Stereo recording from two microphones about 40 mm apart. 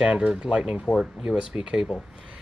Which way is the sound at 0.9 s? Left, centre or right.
Centre.